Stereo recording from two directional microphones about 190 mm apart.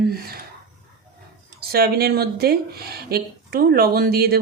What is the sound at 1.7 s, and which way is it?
Speech, 55° right (ahead or behind).